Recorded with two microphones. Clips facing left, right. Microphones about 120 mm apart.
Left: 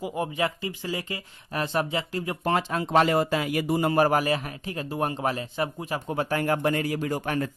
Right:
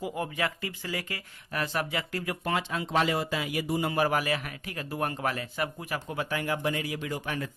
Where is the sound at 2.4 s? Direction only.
40° left (ahead or behind); by 6.1 s 25° left (ahead or behind).